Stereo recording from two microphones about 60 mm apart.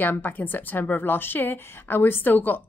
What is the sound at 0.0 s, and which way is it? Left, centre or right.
A woman's voice, left.